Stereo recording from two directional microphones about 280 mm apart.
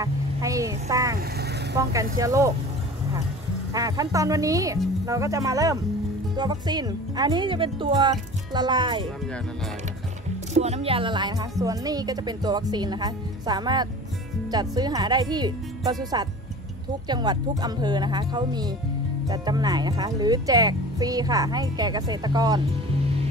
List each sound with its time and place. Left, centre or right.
0.0 s speech: centre
3.7 s speech: centre
10.5 s speech: right